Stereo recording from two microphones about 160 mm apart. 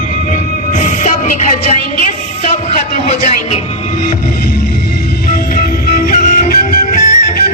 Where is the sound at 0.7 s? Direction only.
50° left (ahead or behind).